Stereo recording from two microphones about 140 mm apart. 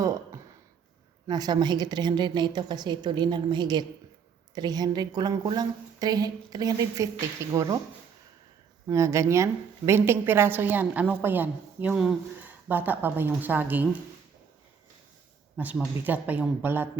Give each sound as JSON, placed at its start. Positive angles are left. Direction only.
{"t": 1.3, "sound": "a woman's voice", "side_deg": -30}
{"t": 8.9, "sound": "a woman's voice", "side_deg": -20}
{"t": 15.5, "sound": "a woman's voice", "side_deg": -10}